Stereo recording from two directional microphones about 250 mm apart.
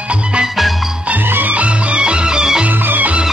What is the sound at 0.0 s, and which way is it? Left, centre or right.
Music, centre.